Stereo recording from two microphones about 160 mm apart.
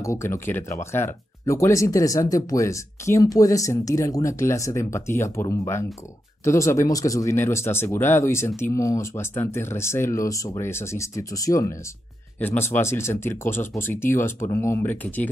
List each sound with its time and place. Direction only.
0.0 s speech: 15° left (ahead or behind)